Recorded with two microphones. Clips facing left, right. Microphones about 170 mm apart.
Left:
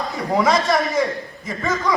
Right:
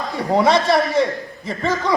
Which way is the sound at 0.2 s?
30° right (ahead or behind).